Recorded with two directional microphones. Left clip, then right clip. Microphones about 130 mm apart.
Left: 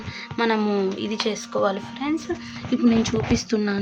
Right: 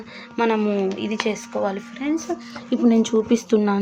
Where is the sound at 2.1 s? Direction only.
15° right (ahead or behind).